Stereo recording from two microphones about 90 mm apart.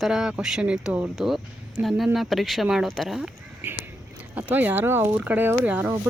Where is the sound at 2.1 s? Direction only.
Centre (ahead or behind).